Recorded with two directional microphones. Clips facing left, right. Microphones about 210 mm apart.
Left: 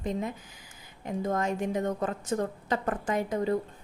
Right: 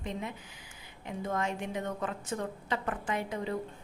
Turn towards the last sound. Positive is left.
turn(degrees=40)  # may be behind; listen again after turning